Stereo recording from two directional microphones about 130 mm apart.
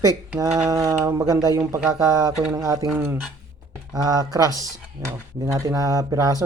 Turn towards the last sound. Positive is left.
turn(degrees=-25)  # may be behind; listen again after turning